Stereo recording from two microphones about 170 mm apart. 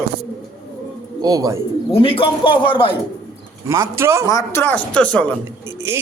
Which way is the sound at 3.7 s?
15° right (ahead or behind).